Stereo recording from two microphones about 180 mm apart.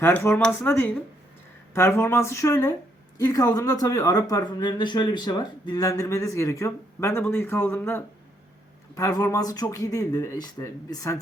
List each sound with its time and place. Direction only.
0.0 s speech: 10° left (ahead or behind)